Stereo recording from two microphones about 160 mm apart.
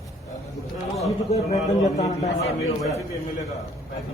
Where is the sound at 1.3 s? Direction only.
40° left (ahead or behind).